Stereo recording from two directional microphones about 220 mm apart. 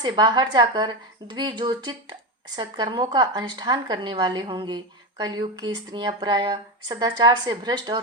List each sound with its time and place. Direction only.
0.0 s speech: 20° right (ahead or behind)